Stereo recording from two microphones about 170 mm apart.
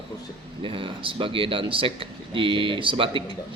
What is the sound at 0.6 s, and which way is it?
A man's voice, 30° right (ahead or behind).